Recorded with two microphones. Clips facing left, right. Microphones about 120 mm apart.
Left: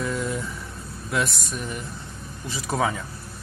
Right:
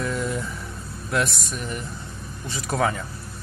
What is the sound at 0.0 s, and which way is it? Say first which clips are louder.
Vehicle: right 1 dB; centre (ahead or behind).